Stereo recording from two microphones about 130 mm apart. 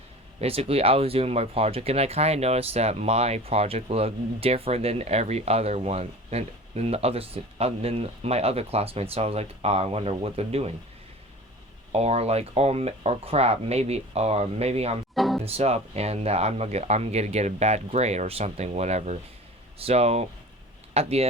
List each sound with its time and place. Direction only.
0.3 s speech: 50° right (ahead or behind)
11.9 s speech: 55° right (ahead or behind)
15.1 s music: centre (ahead or behind)
15.4 s speech: 50° right (ahead or behind)